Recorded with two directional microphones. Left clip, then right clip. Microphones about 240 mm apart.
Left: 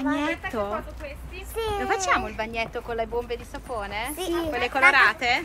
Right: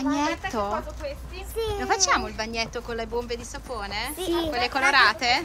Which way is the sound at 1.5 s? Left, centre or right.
Centre.